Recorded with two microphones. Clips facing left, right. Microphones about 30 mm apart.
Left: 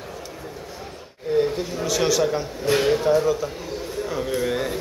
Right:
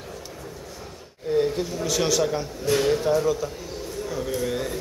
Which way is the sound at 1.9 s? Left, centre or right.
Centre.